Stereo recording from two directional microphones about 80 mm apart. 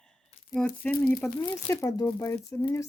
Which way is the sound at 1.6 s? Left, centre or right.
Left.